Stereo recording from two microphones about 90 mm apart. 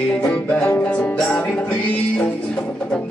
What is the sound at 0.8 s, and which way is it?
Music, 15° left (ahead or behind).